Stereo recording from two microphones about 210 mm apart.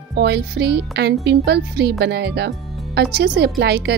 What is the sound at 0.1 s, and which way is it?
Speech, 50° right (ahead or behind).